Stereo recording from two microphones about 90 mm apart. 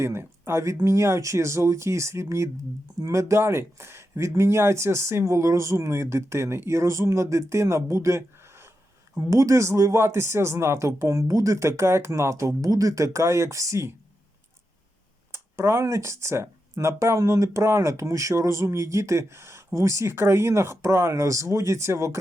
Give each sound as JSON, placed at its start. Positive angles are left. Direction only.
{"t": 0.0, "sound": "speech", "side_deg": -30}
{"t": 15.3, "sound": "speech", "side_deg": -30}